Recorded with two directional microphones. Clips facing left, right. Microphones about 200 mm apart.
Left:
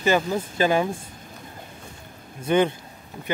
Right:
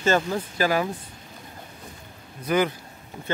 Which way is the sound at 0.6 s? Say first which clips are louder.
Left 3 dB; 25° left (ahead or behind).